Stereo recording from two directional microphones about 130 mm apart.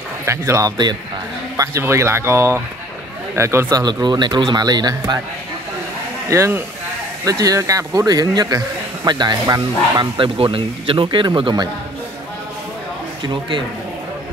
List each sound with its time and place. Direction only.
0.2 s speech: 20° right (ahead or behind)
1.6 s speech: 20° right (ahead or behind)
3.8 s a man's voice: 35° right (ahead or behind)
6.2 s a man's voice: 20° right (ahead or behind)
13.2 s a man's voice: 40° right (ahead or behind)